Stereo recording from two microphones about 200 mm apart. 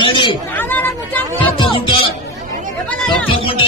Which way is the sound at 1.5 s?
25° left (ahead or behind).